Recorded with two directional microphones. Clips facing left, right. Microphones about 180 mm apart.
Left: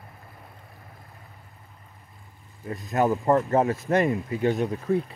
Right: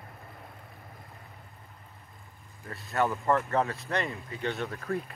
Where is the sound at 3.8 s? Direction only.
20° left (ahead or behind).